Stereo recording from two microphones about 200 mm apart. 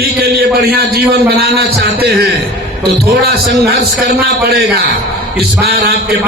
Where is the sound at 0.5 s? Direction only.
50° right (ahead or behind).